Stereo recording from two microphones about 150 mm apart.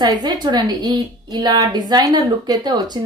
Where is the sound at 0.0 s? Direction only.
25° right (ahead or behind).